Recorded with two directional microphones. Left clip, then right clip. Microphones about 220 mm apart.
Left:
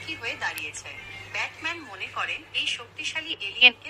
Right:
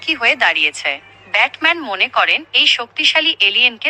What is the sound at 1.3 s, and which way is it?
A woman's voice, 35° right (ahead or behind).